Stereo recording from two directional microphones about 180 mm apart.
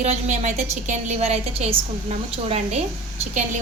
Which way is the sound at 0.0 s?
40° right (ahead or behind).